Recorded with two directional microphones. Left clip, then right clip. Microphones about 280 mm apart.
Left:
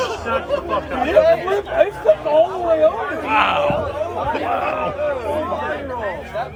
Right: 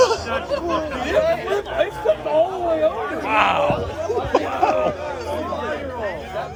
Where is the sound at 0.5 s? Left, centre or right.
Left.